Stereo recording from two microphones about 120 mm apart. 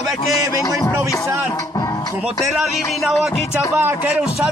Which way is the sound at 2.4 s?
Centre (ahead or behind).